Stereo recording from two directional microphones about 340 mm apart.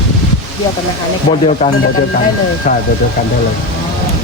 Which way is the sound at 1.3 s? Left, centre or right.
Centre.